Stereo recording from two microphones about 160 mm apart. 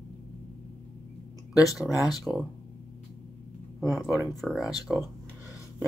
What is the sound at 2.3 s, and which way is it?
Speech, 5° right (ahead or behind).